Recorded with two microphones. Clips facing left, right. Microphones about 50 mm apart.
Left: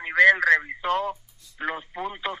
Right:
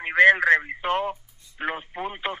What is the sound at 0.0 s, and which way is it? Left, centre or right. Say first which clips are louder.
A man's voice: right 1 dB; right.